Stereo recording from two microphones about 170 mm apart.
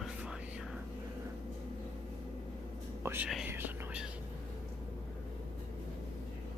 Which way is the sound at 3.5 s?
10° right (ahead or behind).